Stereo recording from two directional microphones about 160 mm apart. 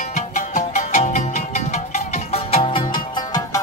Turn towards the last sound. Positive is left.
turn(degrees=25)  # may be behind; listen again after turning